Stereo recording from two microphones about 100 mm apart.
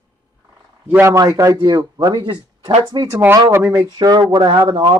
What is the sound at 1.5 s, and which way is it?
Speech, 50° right (ahead or behind).